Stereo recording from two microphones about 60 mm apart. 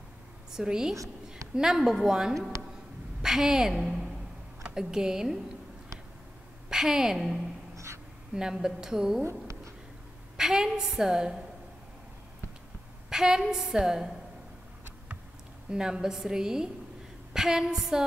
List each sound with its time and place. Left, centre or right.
0.5 s a woman's voice: centre
6.7 s a woman's voice: centre
7.7 s a sound: right
8.4 s a woman's voice: centre
9.2 s speech: right
10.3 s a woman's voice: centre
13.1 s a woman's voice: centre
15.7 s a woman's voice: centre